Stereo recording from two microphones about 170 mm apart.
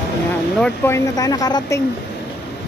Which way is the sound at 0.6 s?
15° left (ahead or behind).